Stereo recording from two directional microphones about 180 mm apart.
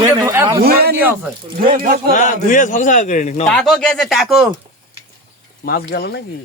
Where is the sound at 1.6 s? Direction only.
50° right (ahead or behind).